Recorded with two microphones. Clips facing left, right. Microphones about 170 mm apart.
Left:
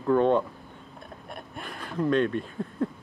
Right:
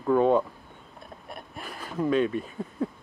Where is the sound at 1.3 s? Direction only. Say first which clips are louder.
Even; centre (ahead or behind).